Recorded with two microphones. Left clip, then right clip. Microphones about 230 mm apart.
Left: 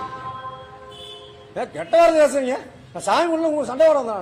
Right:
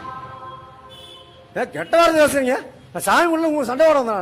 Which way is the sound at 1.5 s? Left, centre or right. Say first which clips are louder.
Right 1 dB; right.